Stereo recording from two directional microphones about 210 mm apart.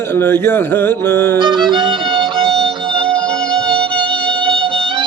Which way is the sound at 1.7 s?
20° right (ahead or behind).